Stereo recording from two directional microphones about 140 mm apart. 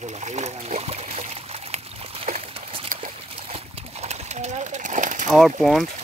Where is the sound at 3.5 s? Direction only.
50° right (ahead or behind).